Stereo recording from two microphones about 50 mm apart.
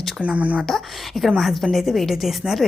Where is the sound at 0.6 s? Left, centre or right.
Centre.